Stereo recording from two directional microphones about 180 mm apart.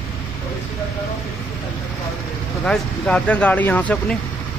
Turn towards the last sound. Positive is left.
turn(degrees=5)  # may be behind; listen again after turning